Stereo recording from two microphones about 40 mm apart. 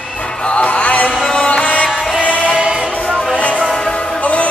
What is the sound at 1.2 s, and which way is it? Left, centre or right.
Music, centre.